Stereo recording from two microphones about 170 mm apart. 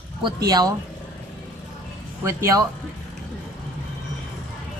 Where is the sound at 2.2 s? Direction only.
20° right (ahead or behind).